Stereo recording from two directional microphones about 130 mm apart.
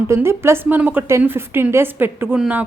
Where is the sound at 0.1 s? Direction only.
20° right (ahead or behind).